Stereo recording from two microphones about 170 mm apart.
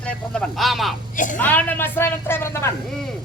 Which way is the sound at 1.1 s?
50° left (ahead or behind).